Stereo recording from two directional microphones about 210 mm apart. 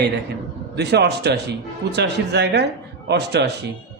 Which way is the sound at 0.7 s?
50° right (ahead or behind).